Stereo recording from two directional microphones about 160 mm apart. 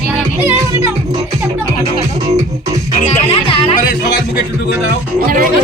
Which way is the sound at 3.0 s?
35° left (ahead or behind).